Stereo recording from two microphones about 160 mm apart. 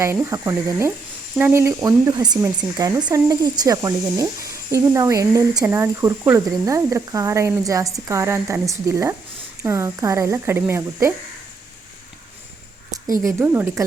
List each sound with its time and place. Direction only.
0.0 s speech: 20° right (ahead or behind)
13.2 s speech: 10° right (ahead or behind)